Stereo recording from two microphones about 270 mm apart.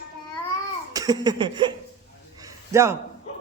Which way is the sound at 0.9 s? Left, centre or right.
Centre.